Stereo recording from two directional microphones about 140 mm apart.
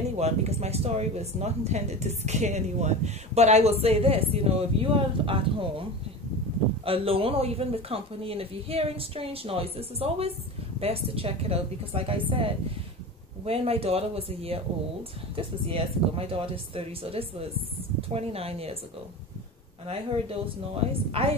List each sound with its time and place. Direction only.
0.2 s speech: 50° right (ahead or behind)
19.9 s speech: 45° right (ahead or behind)